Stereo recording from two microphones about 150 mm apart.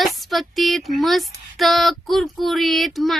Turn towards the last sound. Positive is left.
turn(degrees=0)  # may be behind; listen again after turning